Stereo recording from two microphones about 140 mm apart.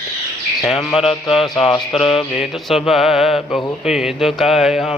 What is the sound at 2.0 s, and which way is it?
Mantra, 40° left (ahead or behind).